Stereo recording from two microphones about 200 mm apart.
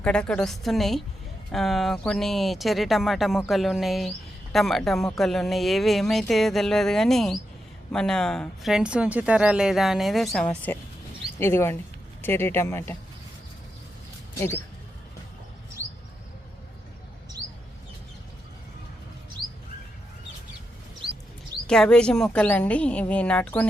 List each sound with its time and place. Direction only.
0.0 s a woman's voice: 5° left (ahead or behind)
14.3 s a woman's voice: 10° left (ahead or behind)
15.8 s a sound: 40° right (ahead or behind)
21.7 s a woman's voice: 5° left (ahead or behind)